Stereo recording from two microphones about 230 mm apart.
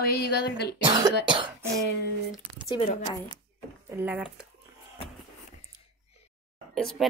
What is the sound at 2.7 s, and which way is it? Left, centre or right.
Speech, left.